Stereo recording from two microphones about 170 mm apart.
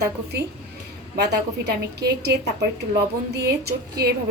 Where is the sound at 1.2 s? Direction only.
75° right (ahead or behind).